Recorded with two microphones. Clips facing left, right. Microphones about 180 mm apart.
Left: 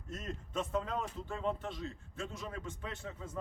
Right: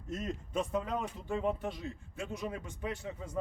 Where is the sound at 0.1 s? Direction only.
10° right (ahead or behind).